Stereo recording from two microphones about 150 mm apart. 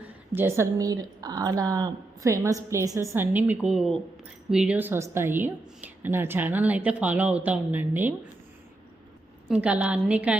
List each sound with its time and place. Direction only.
0.3 s a woman's voice: 15° right (ahead or behind)
9.5 s a woman's voice: 10° right (ahead or behind)